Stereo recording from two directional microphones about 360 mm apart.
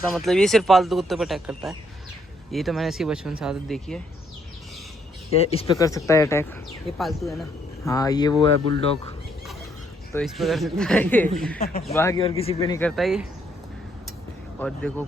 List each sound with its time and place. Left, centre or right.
0.0 s speech: centre
5.3 s speech: centre
5.7 s speech: centre
7.9 s speech: centre
10.1 s speech: centre
11.5 s speech: left
11.9 s speech: centre
14.6 s speech: centre